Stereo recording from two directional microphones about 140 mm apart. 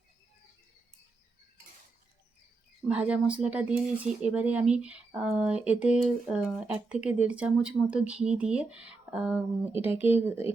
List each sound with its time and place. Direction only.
2.9 s speech: 10° right (ahead or behind)